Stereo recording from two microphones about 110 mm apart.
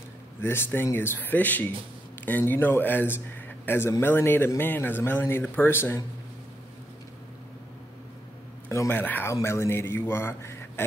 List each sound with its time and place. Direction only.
0.4 s a man's voice: 20° left (ahead or behind)
8.6 s a man's voice: 20° left (ahead or behind)